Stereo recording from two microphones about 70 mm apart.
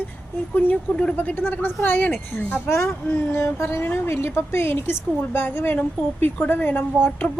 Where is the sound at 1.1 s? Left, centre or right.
Left.